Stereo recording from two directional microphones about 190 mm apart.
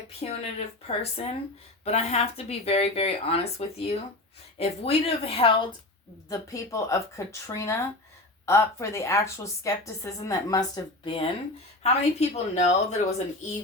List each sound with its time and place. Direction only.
0.2 s speech: 30° left (ahead or behind)
6.2 s a woman's voice: 15° left (ahead or behind)
11.0 s speech: 30° left (ahead or behind)